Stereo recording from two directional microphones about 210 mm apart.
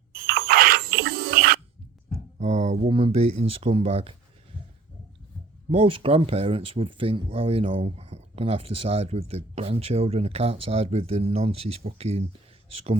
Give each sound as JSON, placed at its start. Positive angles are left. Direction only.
{"t": 0.3, "sound": "a sound", "side_deg": -45}
{"t": 2.4, "sound": "speech", "side_deg": -30}
{"t": 5.7, "sound": "speech", "side_deg": -25}